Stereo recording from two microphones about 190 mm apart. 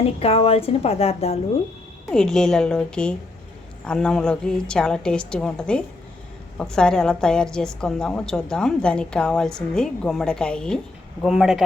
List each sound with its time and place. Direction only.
0.0 s a woman's voice: 30° left (ahead or behind)
2.0 s a woman's voice: 5° left (ahead or behind)